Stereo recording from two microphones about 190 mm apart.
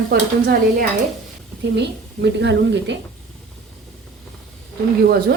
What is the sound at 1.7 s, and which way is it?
A woman's voice, 65° right (ahead or behind).